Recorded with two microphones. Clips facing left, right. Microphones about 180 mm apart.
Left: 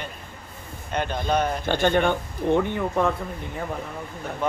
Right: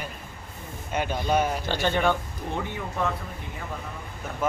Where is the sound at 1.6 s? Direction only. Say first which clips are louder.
Left 4 dB; 55° left (ahead or behind).